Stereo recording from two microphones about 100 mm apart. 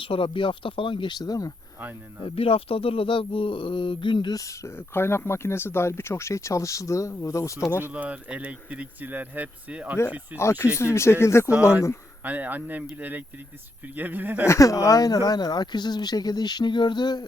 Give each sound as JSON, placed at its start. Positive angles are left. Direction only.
{"t": 0.0, "sound": "speech", "side_deg": 60}
{"t": 2.2, "sound": "speech", "side_deg": 70}
{"t": 4.4, "sound": "speech", "side_deg": 30}
{"t": 7.9, "sound": "speech", "side_deg": -15}
{"t": 10.3, "sound": "speech", "side_deg": 30}
{"t": 12.2, "sound": "speech", "side_deg": -15}
{"t": 14.4, "sound": "speech", "side_deg": 30}